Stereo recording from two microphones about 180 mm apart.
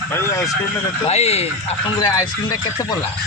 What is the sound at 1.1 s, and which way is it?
Speech, 35° left (ahead or behind).